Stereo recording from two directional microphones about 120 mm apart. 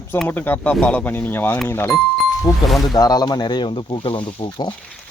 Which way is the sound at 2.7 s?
Centre (ahead or behind).